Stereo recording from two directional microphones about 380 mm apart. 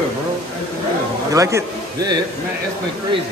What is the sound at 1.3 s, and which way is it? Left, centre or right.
Speech, centre.